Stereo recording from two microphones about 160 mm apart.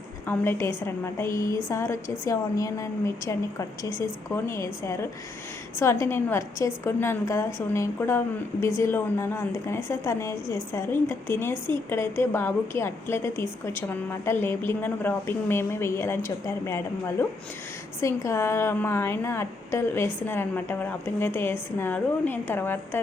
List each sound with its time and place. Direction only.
0.3 s a woman's voice: 15° left (ahead or behind)